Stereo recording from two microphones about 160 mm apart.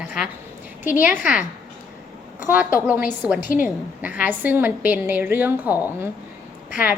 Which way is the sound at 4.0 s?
10° right (ahead or behind).